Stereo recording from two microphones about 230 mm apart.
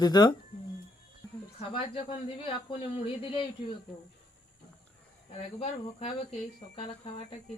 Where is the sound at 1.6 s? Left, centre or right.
Left.